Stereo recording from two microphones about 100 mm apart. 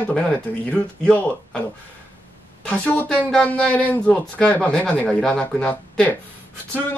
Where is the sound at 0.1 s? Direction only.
10° left (ahead or behind).